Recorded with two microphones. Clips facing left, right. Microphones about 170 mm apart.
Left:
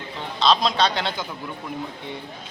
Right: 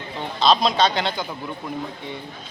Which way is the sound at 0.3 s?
Centre (ahead or behind).